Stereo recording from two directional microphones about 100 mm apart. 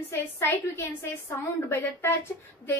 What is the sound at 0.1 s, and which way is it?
A woman's voice, 25° left (ahead or behind).